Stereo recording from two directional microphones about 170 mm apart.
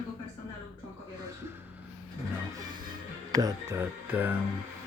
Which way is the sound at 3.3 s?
20° right (ahead or behind).